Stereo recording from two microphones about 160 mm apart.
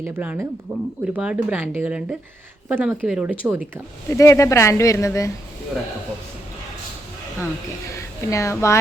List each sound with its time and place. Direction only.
0.0 s speech: 10° right (ahead or behind)
4.1 s speech: 20° left (ahead or behind)
7.9 s a woman's voice: 20° left (ahead or behind)